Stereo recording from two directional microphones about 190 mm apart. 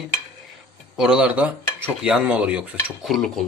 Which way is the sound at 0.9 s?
5° right (ahead or behind).